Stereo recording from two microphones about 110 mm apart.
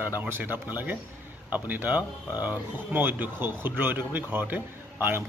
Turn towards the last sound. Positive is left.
turn(degrees=-20)  # may be behind; listen again after turning